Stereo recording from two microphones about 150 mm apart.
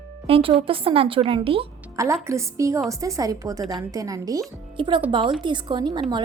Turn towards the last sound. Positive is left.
turn(degrees=-30)  # may be behind; listen again after turning